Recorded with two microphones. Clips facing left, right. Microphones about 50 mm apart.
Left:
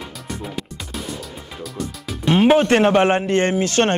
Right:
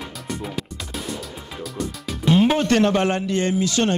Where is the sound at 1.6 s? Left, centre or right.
Centre.